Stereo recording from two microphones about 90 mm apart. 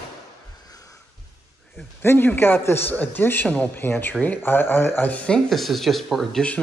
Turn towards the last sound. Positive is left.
turn(degrees=0)  # may be behind; listen again after turning